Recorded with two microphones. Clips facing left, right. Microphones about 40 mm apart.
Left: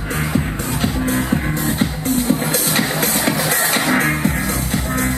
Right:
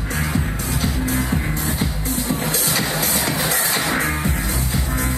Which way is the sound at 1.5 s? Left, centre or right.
Left.